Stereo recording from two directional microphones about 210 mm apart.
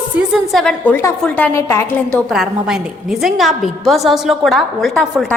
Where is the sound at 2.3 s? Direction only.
Centre (ahead or behind).